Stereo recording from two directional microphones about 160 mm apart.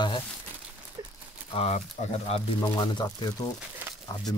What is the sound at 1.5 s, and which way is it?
Speech, 40° left (ahead or behind).